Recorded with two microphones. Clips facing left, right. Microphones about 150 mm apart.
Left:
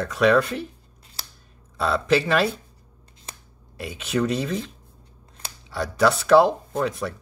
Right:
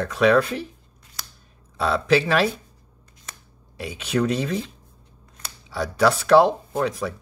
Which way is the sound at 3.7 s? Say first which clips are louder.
Right 1 dB; centre (ahead or behind).